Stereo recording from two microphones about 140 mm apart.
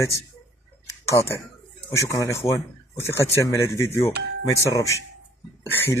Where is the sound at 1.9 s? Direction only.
20° left (ahead or behind).